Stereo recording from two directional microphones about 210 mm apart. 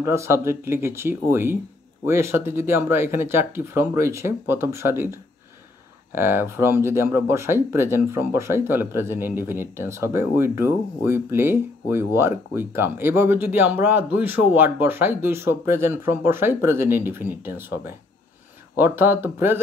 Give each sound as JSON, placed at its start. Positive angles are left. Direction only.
{"t": 0.0, "sound": "speech", "side_deg": -15}